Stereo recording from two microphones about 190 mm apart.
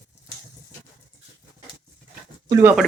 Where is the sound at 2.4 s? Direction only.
15° right (ahead or behind).